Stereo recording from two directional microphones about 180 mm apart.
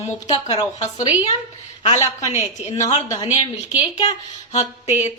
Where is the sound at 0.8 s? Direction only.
35° left (ahead or behind).